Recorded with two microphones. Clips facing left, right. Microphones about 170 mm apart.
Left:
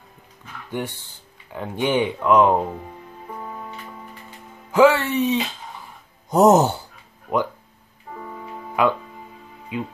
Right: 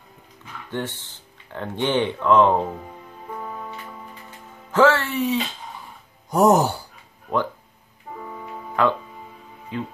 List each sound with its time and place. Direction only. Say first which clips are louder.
0.7 s speech: left 1 dB; 10° left (ahead or behind)
4.6 s speech: left 2 dB; 15° left (ahead or behind)
8.8 s speech: left 1 dB; 10° left (ahead or behind)